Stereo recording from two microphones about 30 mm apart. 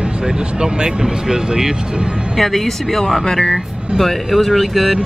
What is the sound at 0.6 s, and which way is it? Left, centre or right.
Speech, centre.